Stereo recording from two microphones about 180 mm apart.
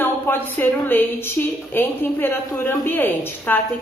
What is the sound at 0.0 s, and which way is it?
A woman's voice, 10° left (ahead or behind).